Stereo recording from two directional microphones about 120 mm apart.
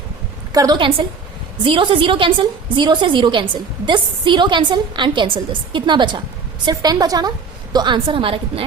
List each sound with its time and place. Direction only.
0.5 s a woman's voice: 30° right (ahead or behind)
0.8 s a woman's voice: 50° right (ahead or behind)